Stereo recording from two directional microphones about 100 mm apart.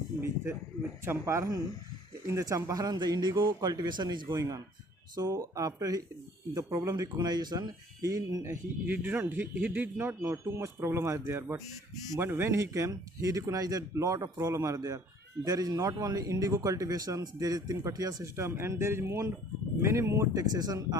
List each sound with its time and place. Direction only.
1.0 s a man's voice: 25° right (ahead or behind); by 4.4 s 45° right (ahead or behind)
4.4 s speech: 35° right (ahead or behind)
8.4 s speech: 20° right (ahead or behind); by 18.3 s 40° right (ahead or behind)
18.3 s speech: 25° right (ahead or behind)